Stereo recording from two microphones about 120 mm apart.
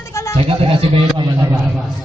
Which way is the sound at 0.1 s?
25° left (ahead or behind).